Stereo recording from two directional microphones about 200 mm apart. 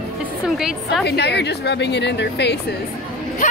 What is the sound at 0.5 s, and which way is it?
Speech, centre (ahead or behind).